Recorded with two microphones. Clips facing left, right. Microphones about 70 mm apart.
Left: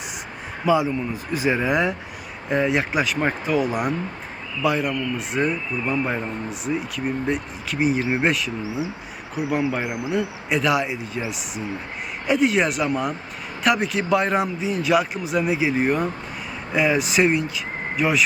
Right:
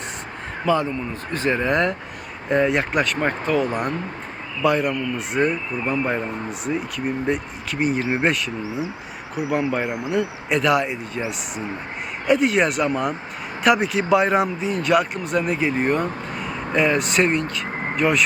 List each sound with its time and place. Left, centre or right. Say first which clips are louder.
0.6 s speech: left 1 dB; centre
9.8 s speech: right 2 dB; centre
10.1 s speech: right 1 dB; centre
12.3 s speech: right 1 dB; centre